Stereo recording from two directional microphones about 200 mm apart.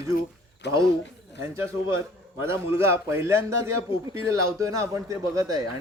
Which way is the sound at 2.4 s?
10° right (ahead or behind).